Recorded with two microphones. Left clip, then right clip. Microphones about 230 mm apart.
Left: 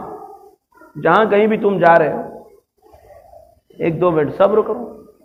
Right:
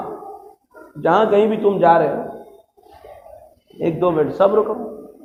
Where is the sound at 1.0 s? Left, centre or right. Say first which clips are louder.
Left 2 dB; left.